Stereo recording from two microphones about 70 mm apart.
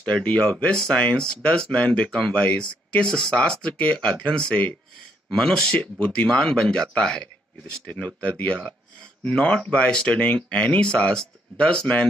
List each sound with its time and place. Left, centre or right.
0.0 s speech: centre
5.8 s speech: centre
6.2 s speech: centre
7.8 s speech: left